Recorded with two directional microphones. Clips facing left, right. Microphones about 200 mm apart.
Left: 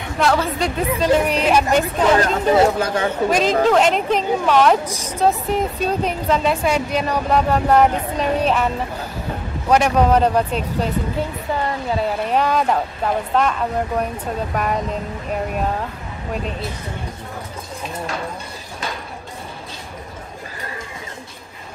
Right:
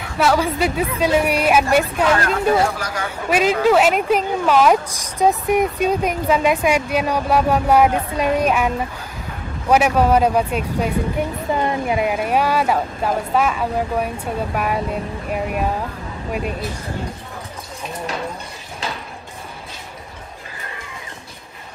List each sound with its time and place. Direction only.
0.2 s speech: 5° right (ahead or behind)
2.1 s speech: 25° left (ahead or behind)
3.3 s speech: 10° right (ahead or behind)